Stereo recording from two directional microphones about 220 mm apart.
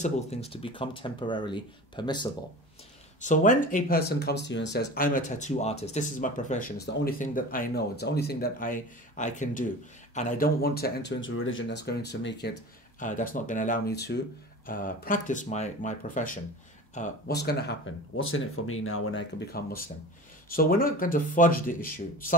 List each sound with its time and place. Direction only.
0.0 s speech: 30° left (ahead or behind)
3.2 s speech: 35° left (ahead or behind); by 12.5 s 50° left (ahead or behind)
13.0 s speech: 35° left (ahead or behind)
17.3 s speech: 50° left (ahead or behind); by 19.2 s 65° left (ahead or behind)
19.6 s speech: 45° left (ahead or behind)